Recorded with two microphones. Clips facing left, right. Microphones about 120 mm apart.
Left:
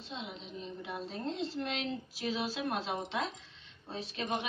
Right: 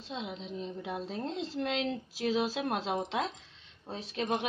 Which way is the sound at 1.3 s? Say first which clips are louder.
Right 3 dB; 90° right.